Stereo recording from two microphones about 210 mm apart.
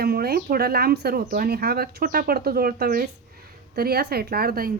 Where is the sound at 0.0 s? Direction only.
45° right (ahead or behind).